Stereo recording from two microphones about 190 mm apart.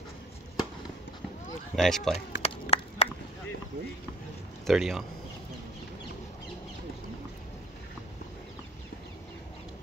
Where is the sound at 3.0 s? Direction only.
35° left (ahead or behind).